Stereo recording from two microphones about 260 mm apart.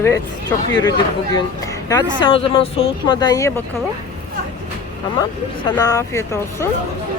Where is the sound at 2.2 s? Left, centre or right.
Left.